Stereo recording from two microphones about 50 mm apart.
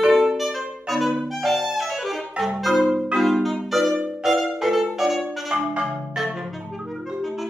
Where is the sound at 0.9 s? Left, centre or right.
Centre.